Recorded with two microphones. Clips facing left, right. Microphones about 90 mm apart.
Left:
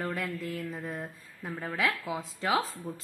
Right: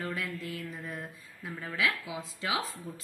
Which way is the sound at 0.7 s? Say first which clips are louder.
Left 3 dB; 35° left (ahead or behind).